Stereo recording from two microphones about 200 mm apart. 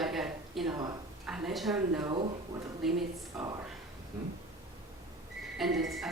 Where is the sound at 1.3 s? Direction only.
Centre (ahead or behind).